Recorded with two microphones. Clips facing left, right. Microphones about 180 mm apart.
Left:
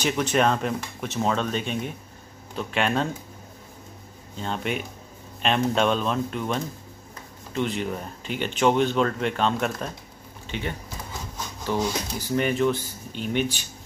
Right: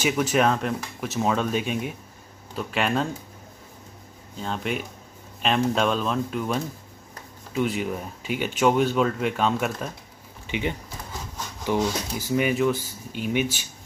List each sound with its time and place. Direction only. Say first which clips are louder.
0.0 s speech: right 1 dB; 5° right (ahead or behind)
4.4 s speech: even; centre (ahead or behind)
10.4 s speech: right 3 dB; 15° right (ahead or behind)